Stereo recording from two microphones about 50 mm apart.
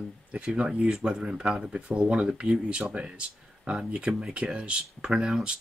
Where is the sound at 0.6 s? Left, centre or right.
Centre.